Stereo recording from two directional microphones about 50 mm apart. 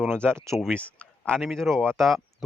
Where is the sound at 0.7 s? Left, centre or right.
Left.